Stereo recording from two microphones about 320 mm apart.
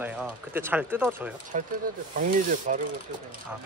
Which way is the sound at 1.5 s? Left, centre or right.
Right.